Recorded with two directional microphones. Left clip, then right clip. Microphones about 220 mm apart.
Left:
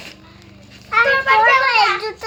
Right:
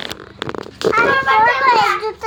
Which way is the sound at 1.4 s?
20° left (ahead or behind).